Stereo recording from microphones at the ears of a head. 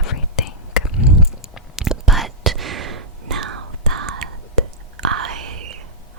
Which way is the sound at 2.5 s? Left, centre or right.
Right.